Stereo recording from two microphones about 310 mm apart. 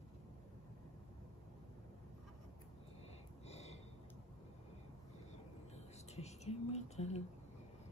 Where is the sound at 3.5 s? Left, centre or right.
Left.